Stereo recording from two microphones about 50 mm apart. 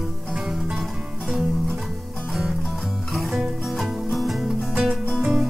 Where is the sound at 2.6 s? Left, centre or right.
Centre.